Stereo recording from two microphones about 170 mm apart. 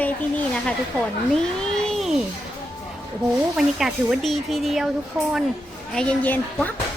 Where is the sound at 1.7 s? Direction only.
5° left (ahead or behind).